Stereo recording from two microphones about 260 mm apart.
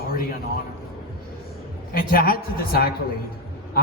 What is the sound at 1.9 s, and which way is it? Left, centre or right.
A man's voice, left.